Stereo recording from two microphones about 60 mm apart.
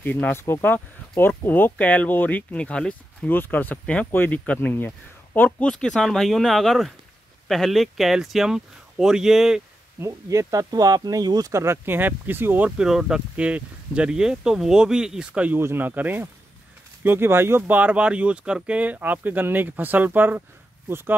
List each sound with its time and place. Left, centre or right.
0.0 s speech: left
1.8 s speech: left
3.3 s speech: left
3.8 s speech: left
4.1 s speech: left
5.6 s speech: centre
9.9 s speech: right
11.5 s speech: right
11.8 s speech: right
12.6 s speech: centre
13.4 s speech: right
15.6 s speech: right
17.6 s speech: right